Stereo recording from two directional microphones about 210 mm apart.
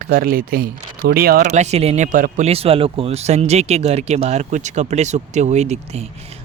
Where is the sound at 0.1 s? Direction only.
45° right (ahead or behind).